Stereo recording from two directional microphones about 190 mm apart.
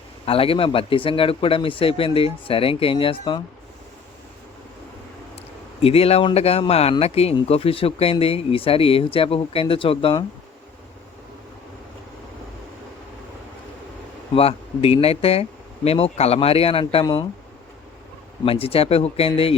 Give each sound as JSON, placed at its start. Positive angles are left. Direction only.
{"t": 0.3, "sound": "speech", "side_deg": 30}
{"t": 5.8, "sound": "speech", "side_deg": 30}
{"t": 14.3, "sound": "speech", "side_deg": 30}
{"t": 18.4, "sound": "speech", "side_deg": 30}